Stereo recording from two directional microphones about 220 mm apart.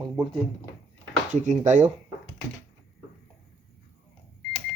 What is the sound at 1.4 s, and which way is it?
Speech, 35° right (ahead or behind).